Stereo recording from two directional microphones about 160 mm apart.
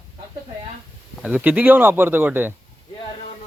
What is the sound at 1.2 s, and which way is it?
Speech, 10° right (ahead or behind).